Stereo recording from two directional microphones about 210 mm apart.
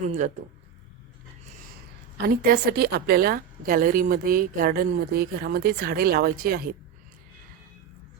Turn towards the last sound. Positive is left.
turn(degrees=-45)  # may be behind; listen again after turning